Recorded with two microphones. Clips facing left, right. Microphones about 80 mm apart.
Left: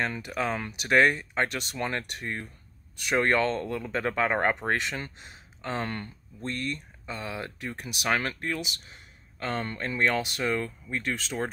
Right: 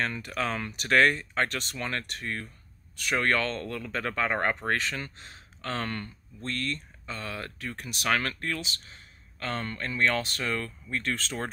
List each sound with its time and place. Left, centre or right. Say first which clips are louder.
0.0 s speech: left 1 dB; centre